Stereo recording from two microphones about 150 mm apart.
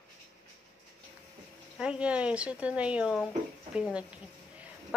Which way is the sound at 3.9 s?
10° right (ahead or behind).